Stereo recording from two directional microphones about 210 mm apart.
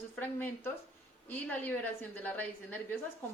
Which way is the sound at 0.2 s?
10° left (ahead or behind).